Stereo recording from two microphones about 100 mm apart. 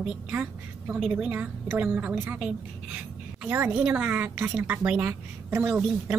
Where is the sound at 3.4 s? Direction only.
15° right (ahead or behind).